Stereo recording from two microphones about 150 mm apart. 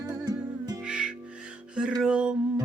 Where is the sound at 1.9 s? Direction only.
5° right (ahead or behind).